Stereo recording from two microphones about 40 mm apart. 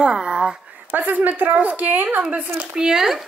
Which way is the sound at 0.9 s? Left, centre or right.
Right.